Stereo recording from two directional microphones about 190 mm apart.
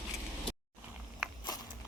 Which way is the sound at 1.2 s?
Centre (ahead or behind).